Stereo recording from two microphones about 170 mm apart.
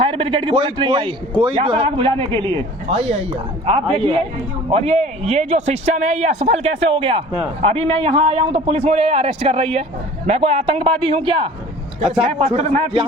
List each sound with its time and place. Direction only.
0.0 s a man's voice: 30° right (ahead or behind)